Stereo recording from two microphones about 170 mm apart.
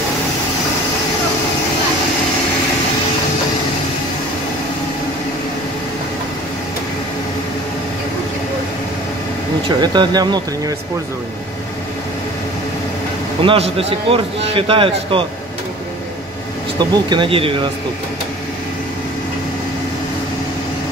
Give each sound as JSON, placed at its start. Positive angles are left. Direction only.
{"t": 9.7, "sound": "speech", "side_deg": -25}
{"t": 13.4, "sound": "a man's voice", "side_deg": -30}
{"t": 17.1, "sound": "a man's voice", "side_deg": -30}